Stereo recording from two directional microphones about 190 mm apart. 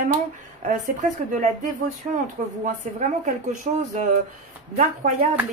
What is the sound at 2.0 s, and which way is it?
Speech, 35° right (ahead or behind).